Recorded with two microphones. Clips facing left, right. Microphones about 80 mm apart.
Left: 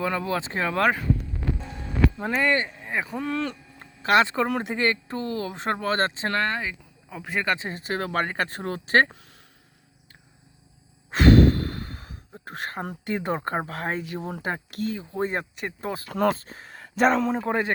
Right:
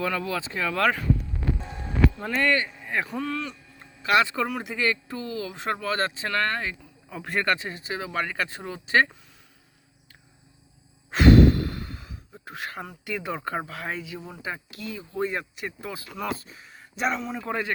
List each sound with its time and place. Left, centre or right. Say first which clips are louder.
0.0 s speech: left 2 dB; left
0.8 s speech: left 1 dB; centre
2.1 s speech: left 1 dB; centre
3.4 s a sound: left 6 dB; left
4.0 s speech: left 2 dB; left
6.6 s speech: even; centre
7.4 s speech: right 1 dB; left
7.7 s speech: left 4 dB; left
11.1 s sigh: even; left
11.7 s speech: left 1 dB; left
14.8 s speech: left 1 dB; left
15.5 s speech: left 4 dB; left
16.0 s speech: left 10 dB; left
17.4 s speech: left 4 dB; left